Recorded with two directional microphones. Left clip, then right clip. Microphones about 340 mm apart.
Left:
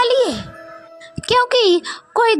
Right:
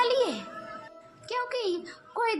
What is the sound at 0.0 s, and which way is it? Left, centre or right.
Music, centre.